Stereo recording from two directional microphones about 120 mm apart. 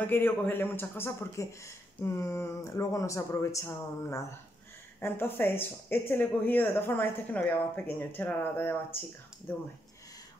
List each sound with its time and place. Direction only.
0.0 s speech: 15° left (ahead or behind)